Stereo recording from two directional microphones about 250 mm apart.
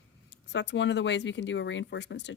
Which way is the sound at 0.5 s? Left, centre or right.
Left.